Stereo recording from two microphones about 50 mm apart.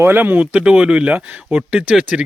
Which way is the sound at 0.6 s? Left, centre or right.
Centre.